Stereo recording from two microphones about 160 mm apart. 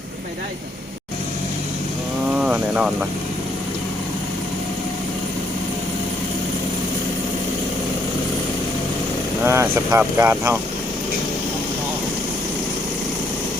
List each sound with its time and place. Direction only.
2.3 s vehicle: 5° right (ahead or behind)
9.4 s speech: 15° right (ahead or behind)